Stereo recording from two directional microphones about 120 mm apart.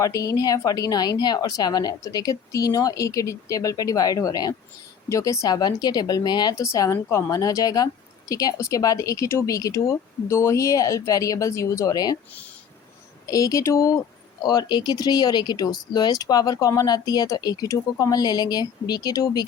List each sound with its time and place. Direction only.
0.0 s a woman's voice: 30° left (ahead or behind)
13.2 s speech: 30° left (ahead or behind)
14.4 s a woman's voice: 35° left (ahead or behind)